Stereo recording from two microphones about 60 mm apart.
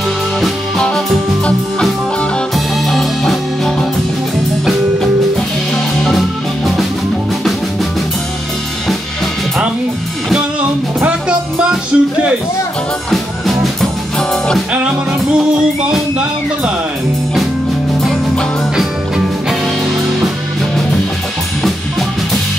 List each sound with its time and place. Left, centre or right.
0.8 s music: centre
6.0 s music: centre
11.1 s music: centre
13.1 s music: centre